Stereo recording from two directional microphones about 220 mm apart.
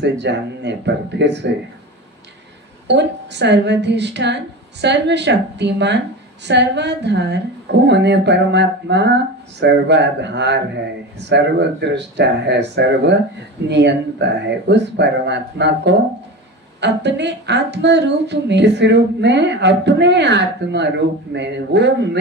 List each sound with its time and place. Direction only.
0.0 s a woman's voice: 50° right (ahead or behind)
2.9 s a woman's voice: 50° right (ahead or behind)